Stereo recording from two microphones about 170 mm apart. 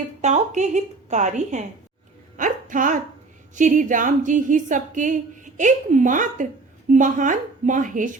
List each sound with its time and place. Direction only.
0.2 s speech: 45° right (ahead or behind)
2.4 s music: 50° right (ahead or behind)
3.5 s speech: 50° right (ahead or behind)